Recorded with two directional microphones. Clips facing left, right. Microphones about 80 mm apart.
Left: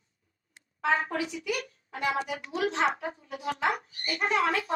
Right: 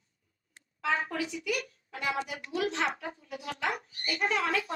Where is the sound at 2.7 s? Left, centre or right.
Left.